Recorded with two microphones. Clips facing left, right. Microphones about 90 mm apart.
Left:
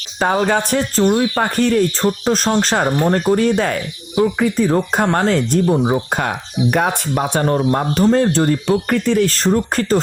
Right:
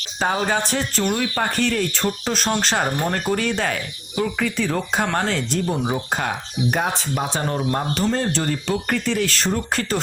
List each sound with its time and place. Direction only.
0.2 s speech: 45° left (ahead or behind)
5.6 s speech: 25° left (ahead or behind)
6.1 s speech: 50° left (ahead or behind)